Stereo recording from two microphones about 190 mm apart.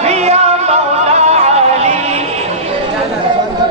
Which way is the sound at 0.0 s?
35° right (ahead or behind).